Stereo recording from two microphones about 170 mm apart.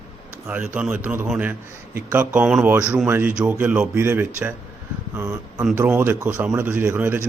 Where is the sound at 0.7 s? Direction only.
5° right (ahead or behind).